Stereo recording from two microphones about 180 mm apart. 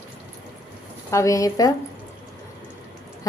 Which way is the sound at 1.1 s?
15° left (ahead or behind).